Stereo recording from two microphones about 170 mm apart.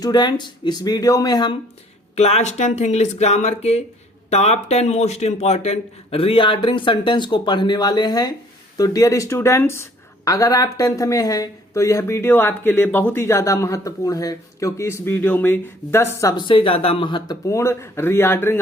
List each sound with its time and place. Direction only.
0.0 s speech: 25° left (ahead or behind)
2.1 s a man's voice: 40° left (ahead or behind); by 18.6 s 15° left (ahead or behind)